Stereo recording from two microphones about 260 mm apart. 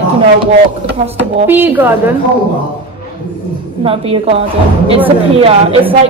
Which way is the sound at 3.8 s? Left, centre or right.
Right.